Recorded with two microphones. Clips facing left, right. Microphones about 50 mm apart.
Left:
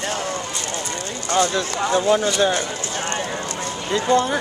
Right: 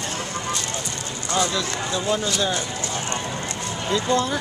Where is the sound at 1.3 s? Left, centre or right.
Left.